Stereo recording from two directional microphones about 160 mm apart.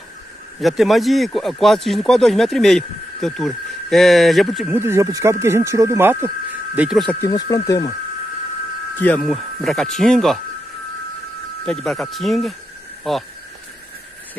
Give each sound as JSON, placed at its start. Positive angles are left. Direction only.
{"t": 0.6, "sound": "speech", "side_deg": 0}
{"t": 4.6, "sound": "speech", "side_deg": -15}
{"t": 7.2, "sound": "speech", "side_deg": 20}
{"t": 9.0, "sound": "speech", "side_deg": 5}
{"t": 11.6, "sound": "speech", "side_deg": 5}